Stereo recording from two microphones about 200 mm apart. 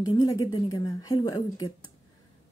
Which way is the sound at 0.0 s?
20° left (ahead or behind).